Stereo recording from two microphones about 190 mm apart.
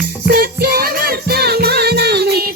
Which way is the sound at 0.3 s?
55° right (ahead or behind).